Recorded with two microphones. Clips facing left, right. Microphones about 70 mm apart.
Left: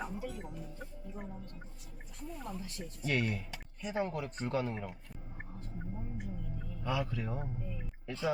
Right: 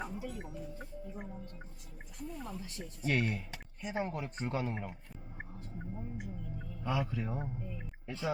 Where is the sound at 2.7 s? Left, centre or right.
Right.